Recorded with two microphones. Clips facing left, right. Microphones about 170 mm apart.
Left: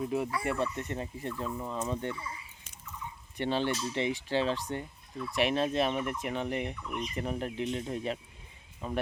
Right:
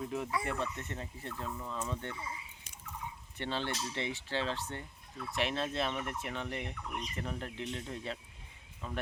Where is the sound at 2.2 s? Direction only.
20° right (ahead or behind).